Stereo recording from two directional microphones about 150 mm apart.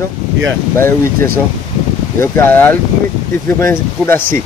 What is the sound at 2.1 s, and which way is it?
Speech, 15° left (ahead or behind).